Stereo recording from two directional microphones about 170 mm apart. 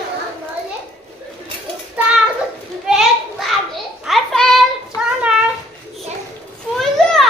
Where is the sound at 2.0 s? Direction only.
10° right (ahead or behind).